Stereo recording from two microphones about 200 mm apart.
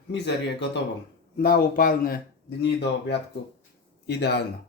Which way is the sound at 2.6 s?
60° left (ahead or behind).